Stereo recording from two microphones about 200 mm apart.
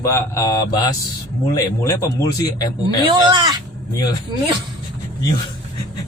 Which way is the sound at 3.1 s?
25° right (ahead or behind).